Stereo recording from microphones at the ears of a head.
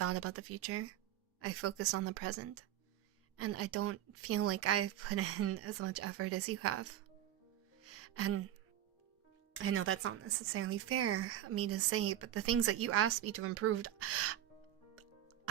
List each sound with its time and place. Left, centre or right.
0.0 s speech: right
7.9 s music: right
9.5 s speech: right